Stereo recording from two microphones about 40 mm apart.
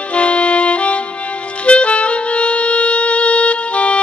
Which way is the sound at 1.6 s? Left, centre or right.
Left.